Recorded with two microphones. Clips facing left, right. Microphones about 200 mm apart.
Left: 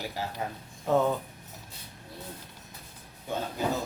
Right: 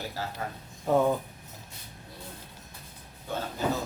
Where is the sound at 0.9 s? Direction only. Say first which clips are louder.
Right 1 dB; 10° right (ahead or behind).